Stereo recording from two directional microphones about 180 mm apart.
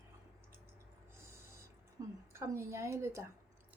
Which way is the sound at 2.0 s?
20° right (ahead or behind).